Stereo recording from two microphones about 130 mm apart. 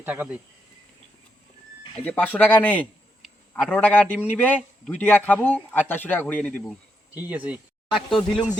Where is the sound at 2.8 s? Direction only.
5° right (ahead or behind).